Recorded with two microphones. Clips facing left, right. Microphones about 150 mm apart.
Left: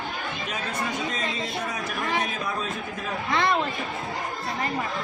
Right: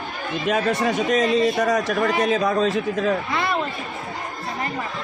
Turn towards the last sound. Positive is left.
turn(degrees=-5)  # may be behind; listen again after turning